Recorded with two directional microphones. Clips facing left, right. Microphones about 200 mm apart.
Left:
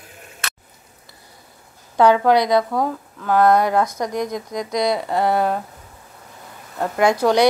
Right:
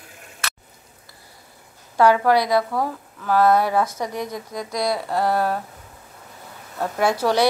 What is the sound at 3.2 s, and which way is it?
Speech, 5° right (ahead or behind).